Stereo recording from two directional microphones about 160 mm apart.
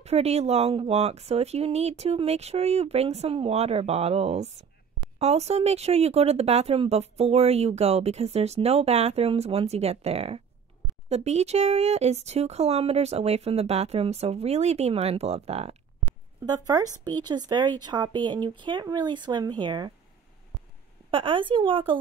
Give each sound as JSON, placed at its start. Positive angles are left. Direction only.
{"t": 0.0, "sound": "speech", "side_deg": -40}
{"t": 16.4, "sound": "speech", "side_deg": -25}
{"t": 21.1, "sound": "speech", "side_deg": -35}